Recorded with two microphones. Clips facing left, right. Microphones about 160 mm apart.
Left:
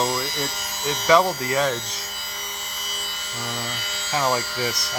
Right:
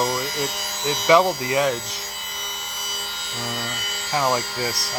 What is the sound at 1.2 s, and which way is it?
Speech, 10° right (ahead or behind).